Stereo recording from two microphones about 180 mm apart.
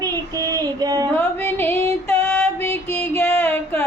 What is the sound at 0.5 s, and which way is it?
Female singing, 20° right (ahead or behind).